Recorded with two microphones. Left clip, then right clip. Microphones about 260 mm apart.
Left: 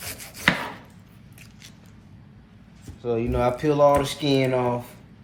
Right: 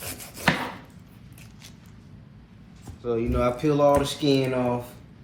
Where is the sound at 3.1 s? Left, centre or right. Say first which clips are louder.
Left 1 dB; left.